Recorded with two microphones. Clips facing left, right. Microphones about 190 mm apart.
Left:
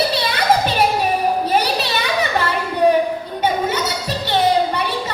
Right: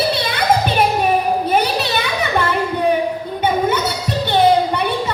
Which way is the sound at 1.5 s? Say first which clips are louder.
Right 1 dB; 55° right (ahead or behind).